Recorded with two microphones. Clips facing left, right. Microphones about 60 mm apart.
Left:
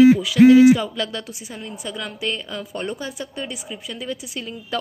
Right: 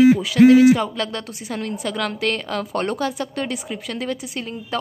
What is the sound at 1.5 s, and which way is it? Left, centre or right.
A woman's voice, right.